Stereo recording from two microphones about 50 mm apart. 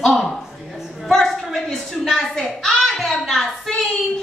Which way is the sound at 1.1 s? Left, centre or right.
Centre.